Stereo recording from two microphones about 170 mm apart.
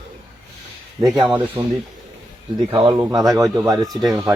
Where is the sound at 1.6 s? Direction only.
15° right (ahead or behind).